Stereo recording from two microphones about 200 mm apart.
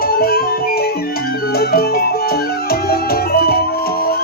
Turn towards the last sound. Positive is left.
turn(degrees=50)  # may be behind; listen again after turning